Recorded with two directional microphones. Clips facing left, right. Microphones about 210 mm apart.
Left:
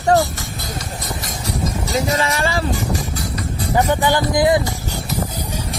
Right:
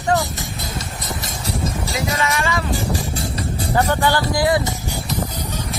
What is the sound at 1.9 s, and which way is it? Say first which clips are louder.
Speech: left 4 dB; 30° left (ahead or behind).